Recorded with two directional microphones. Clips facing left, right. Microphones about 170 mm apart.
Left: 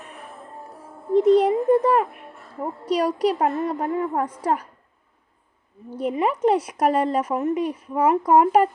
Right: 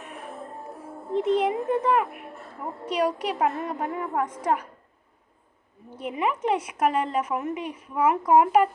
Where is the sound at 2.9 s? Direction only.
35° left (ahead or behind).